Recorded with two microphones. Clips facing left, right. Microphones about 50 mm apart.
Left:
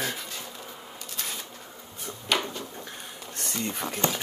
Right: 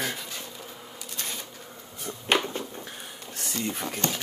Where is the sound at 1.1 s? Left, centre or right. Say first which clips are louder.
Even; centre.